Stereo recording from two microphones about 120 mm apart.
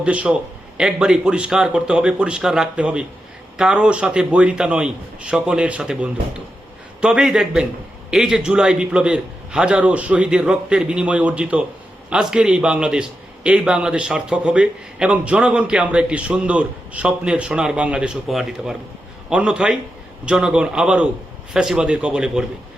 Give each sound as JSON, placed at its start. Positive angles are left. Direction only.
{"t": 0.0, "sound": "a man's voice", "side_deg": -10}